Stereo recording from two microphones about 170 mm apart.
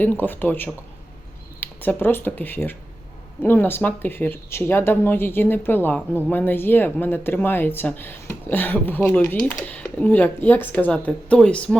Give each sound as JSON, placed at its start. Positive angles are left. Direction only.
{"t": 0.0, "sound": "speech", "side_deg": 10}